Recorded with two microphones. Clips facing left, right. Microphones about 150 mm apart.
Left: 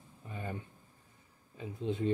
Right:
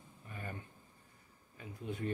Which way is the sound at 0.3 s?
20° left (ahead or behind).